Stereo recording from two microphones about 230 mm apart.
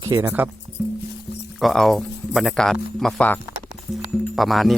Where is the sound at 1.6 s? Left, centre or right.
Centre.